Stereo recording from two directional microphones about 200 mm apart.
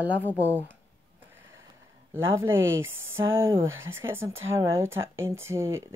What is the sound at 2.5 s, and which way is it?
Speech, 75° right (ahead or behind).